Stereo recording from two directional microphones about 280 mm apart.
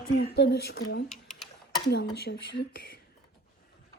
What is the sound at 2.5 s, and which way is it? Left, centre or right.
Speech, left.